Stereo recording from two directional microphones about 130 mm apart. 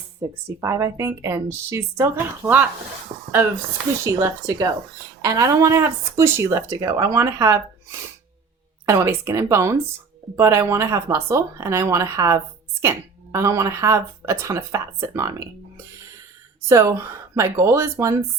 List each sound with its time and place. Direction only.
0.2 s speech: 25° right (ahead or behind)
3.1 s speech: 55° right (ahead or behind)
4.0 s speech: 25° right (ahead or behind)
8.9 s speech: 20° right (ahead or behind)
16.6 s speech: 25° right (ahead or behind)